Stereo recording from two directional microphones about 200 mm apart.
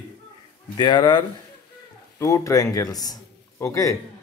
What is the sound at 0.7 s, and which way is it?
A man's voice, 20° left (ahead or behind).